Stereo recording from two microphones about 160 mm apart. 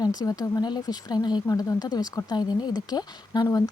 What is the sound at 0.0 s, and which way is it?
Speech, 25° left (ahead or behind).